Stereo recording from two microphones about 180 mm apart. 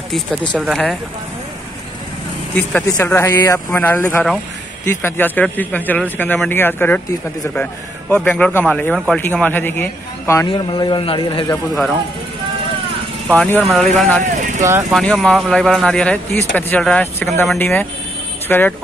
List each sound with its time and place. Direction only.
0.5 s speech: centre (ahead or behind)
2.5 s speech: 10° left (ahead or behind)
10.5 s a man's voice: 25° left (ahead or behind)
11.7 s speech: centre (ahead or behind)
13.3 s speech: 10° left (ahead or behind)
14.2 s vehicle: 40° right (ahead or behind)
14.9 s speech: centre (ahead or behind)